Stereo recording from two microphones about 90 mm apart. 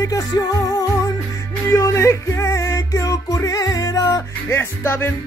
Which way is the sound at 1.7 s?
35° left (ahead or behind).